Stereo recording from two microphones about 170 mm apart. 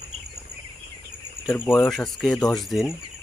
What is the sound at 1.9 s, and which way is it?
Speech, centre (ahead or behind).